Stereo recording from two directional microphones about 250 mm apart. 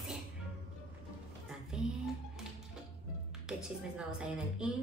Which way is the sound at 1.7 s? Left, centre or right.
Centre.